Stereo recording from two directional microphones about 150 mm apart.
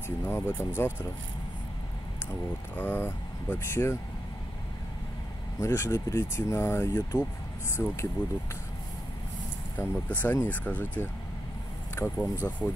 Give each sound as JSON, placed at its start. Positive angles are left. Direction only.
{"t": 0.2, "sound": "speech", "side_deg": 15}
{"t": 2.7, "sound": "speech", "side_deg": 15}
{"t": 5.6, "sound": "speech", "side_deg": 20}
{"t": 9.8, "sound": "speech", "side_deg": 10}